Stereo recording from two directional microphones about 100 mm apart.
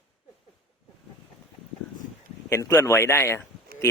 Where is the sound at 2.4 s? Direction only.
30° left (ahead or behind).